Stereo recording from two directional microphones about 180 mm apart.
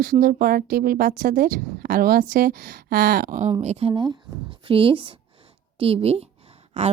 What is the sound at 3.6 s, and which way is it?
A woman's voice, 35° right (ahead or behind).